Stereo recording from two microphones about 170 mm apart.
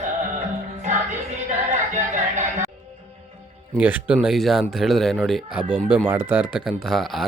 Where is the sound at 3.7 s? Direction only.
10° right (ahead or behind).